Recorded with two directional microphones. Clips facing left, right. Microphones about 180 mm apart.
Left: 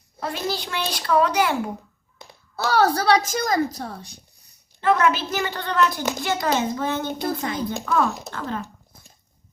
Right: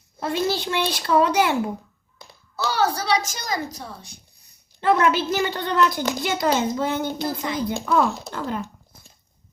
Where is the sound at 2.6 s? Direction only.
55° left (ahead or behind).